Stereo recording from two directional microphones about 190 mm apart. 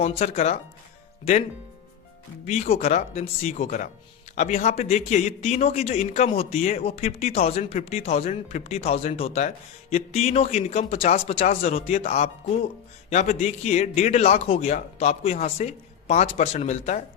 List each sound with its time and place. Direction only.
0.2 s speech: 35° left (ahead or behind)
2.5 s speech: 35° left (ahead or behind)